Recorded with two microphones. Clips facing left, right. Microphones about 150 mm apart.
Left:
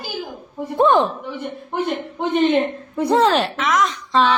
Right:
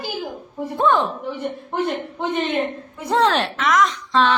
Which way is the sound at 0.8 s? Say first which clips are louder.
Left 4 dB; 20° left (ahead or behind).